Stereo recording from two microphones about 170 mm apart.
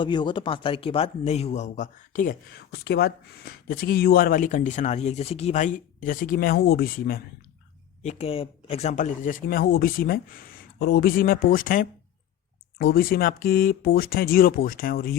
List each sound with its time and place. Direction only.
0.0 s speech: 30° left (ahead or behind); by 2.4 s 50° left (ahead or behind)
2.8 s speech: 70° left (ahead or behind)
8.0 s speech: 35° left (ahead or behind); by 15.1 s 60° left (ahead or behind)